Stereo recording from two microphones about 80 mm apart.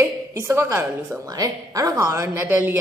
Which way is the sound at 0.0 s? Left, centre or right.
Right.